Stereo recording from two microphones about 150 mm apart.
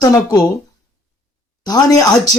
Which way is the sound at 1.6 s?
25° left (ahead or behind).